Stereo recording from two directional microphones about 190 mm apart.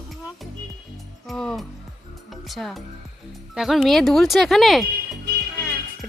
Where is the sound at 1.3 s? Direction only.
Centre (ahead or behind).